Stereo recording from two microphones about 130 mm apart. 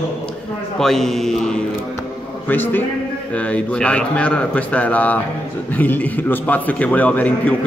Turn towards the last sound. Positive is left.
turn(degrees=10)  # may be behind; listen again after turning